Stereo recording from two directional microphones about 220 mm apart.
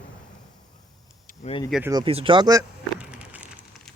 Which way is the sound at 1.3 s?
30° left (ahead or behind).